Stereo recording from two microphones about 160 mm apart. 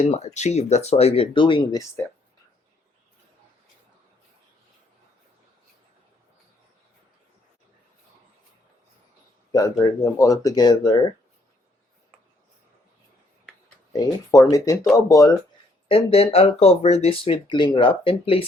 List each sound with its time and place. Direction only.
0.0 s speech: 45° left (ahead or behind)
9.5 s speech: 20° left (ahead or behind)
13.9 s speech: 25° left (ahead or behind)
15.9 s speech: 35° left (ahead or behind)